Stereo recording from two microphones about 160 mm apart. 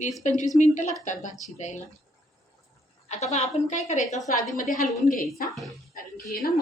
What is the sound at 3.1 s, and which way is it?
Speech, 45° left (ahead or behind).